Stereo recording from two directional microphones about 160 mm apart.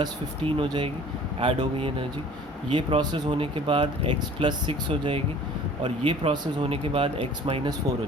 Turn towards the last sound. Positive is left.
turn(degrees=-35)  # may be behind; listen again after turning